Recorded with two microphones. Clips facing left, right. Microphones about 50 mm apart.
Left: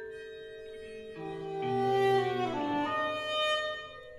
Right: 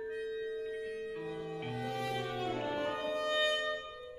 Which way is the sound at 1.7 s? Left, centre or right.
Left.